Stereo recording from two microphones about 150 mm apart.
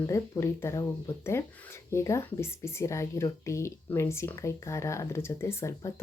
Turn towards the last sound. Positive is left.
turn(degrees=20)  # may be behind; listen again after turning